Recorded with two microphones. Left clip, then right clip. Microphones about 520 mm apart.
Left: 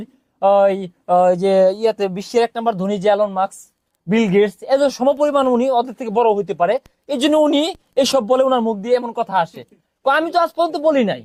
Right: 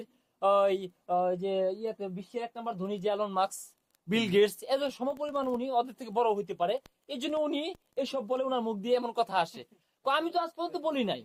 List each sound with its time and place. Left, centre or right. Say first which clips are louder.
0.0 s speech: left 12 dB; left
3.2 s a woman's voice: left 10 dB; left